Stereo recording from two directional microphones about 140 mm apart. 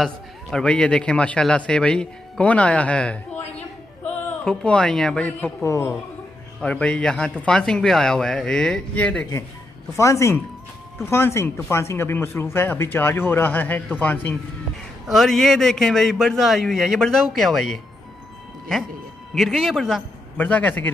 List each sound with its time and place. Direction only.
0.0 s speech: 5° left (ahead or behind)
5.7 s speech: 20° left (ahead or behind)
6.6 s speech: 10° left (ahead or behind)
9.9 s a man's voice: 20° left (ahead or behind)
15.0 s speech: centre (ahead or behind)
19.3 s a man's voice: centre (ahead or behind)